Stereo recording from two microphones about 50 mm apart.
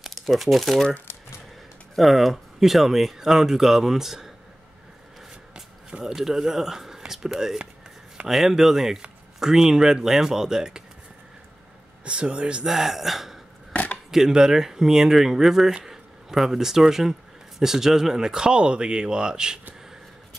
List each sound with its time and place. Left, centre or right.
0.0 s speech: centre
1.1 s a sound: left
2.0 s speech: centre
5.5 s a sound: centre
6.1 s speech: centre
12.0 s speech: right
12.6 s speech: centre
13.7 s chopping: left
14.1 s speech: centre